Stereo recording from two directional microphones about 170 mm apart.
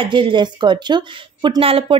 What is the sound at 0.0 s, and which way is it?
A woman's voice, 30° right (ahead or behind).